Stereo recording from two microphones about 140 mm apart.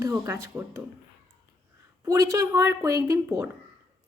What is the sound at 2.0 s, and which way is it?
Speech, 25° right (ahead or behind).